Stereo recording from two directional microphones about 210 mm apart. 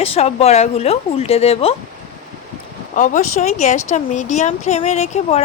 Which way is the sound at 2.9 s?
40° left (ahead or behind).